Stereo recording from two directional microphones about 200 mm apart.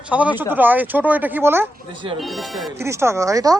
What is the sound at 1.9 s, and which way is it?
Speech, 25° right (ahead or behind).